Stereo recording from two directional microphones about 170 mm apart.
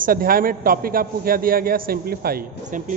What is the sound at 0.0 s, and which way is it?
A man's voice, 60° right (ahead or behind).